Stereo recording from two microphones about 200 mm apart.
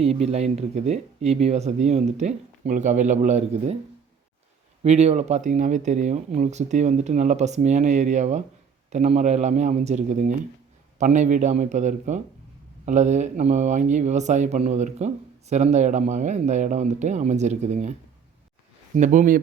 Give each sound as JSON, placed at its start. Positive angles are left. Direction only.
{"t": 0.0, "sound": "speech", "side_deg": -30}
{"t": 4.8, "sound": "speech", "side_deg": -35}
{"t": 18.9, "sound": "speech", "side_deg": -40}